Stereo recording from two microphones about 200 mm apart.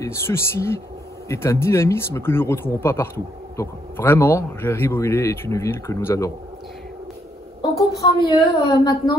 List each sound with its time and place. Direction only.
0.0 s a man's voice: 15° left (ahead or behind)
8.0 s a woman's voice: 20° left (ahead or behind)